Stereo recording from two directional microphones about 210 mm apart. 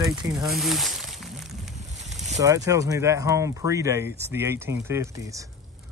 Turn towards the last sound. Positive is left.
turn(degrees=-15)  # may be behind; listen again after turning